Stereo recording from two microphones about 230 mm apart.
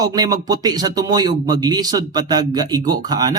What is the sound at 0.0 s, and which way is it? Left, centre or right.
A man's voice, centre.